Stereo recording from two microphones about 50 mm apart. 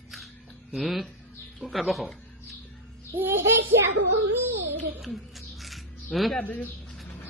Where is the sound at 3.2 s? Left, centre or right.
Right.